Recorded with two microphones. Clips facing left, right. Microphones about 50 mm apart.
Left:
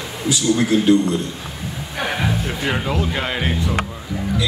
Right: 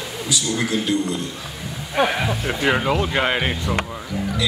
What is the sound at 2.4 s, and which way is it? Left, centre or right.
Speech, centre.